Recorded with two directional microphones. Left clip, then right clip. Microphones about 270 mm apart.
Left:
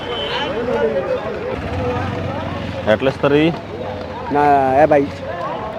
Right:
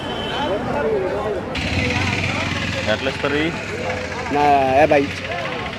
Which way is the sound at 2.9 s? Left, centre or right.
Left.